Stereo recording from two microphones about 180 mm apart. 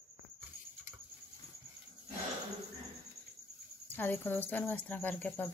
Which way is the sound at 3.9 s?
10° left (ahead or behind).